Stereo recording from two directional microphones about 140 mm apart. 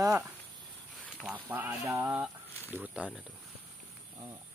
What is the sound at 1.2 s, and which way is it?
Speech, 10° right (ahead or behind).